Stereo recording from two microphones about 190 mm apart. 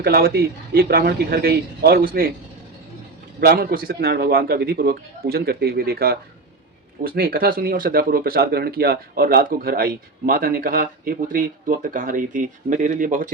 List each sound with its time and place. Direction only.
0.0 s speech: 55° right (ahead or behind)
3.4 s speech: 50° right (ahead or behind)